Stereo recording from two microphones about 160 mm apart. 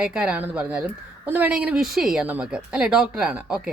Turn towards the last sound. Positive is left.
turn(degrees=-5)  # may be behind; listen again after turning